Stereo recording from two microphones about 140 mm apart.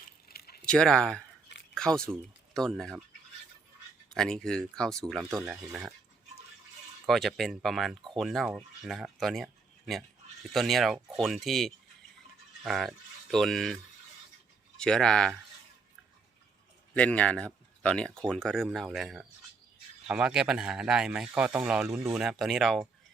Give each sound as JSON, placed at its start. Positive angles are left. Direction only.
{"t": 0.3, "sound": "a sound", "side_deg": 90}
{"t": 0.6, "sound": "speech", "side_deg": 5}
{"t": 1.7, "sound": "a sound", "side_deg": 5}
{"t": 2.5, "sound": "speech", "side_deg": 5}
{"t": 4.1, "sound": "speech", "side_deg": 0}
{"t": 7.1, "sound": "speech", "side_deg": 0}
{"t": 14.8, "sound": "speech", "side_deg": 5}
{"t": 16.9, "sound": "speech", "side_deg": 10}